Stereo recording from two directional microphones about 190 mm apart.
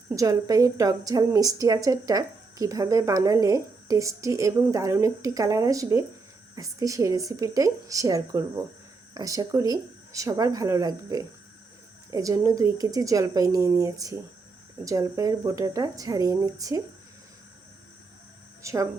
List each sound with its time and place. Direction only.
0.1 s a woman's voice: 20° right (ahead or behind)
18.6 s speech: 15° right (ahead or behind)